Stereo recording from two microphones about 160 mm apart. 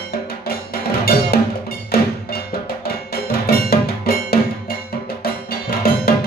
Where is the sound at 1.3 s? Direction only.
75° left (ahead or behind).